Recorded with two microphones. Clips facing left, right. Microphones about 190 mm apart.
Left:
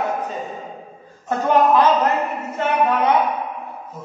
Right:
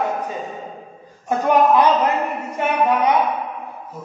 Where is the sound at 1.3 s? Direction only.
10° right (ahead or behind).